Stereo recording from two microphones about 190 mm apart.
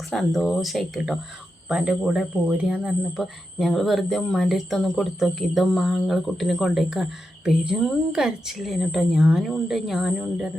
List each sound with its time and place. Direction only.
0.1 s speech: centre (ahead or behind)